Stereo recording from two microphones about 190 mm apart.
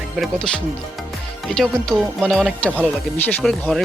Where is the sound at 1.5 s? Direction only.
Centre (ahead or behind).